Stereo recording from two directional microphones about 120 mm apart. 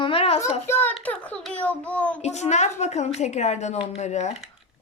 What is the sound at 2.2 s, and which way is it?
A woman's voice, 70° left (ahead or behind).